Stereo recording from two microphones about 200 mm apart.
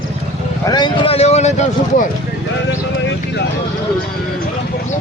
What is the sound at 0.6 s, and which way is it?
Speech, 20° left (ahead or behind).